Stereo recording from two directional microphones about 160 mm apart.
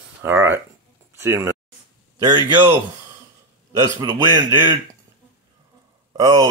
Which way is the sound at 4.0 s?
25° right (ahead or behind).